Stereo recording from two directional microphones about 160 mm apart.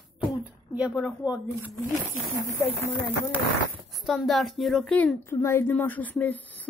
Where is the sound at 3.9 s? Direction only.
Centre (ahead or behind).